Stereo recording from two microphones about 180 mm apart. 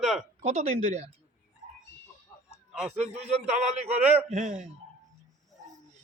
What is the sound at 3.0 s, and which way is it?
Speech, 35° right (ahead or behind).